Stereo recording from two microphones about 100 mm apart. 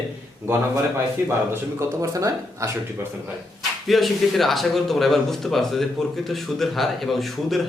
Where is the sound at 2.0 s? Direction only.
35° right (ahead or behind).